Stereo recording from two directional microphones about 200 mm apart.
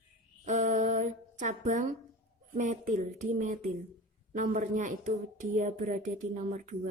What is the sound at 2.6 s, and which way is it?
Speech, 40° right (ahead or behind).